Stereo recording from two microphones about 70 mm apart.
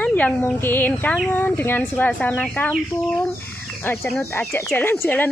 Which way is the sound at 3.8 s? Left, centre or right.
Left.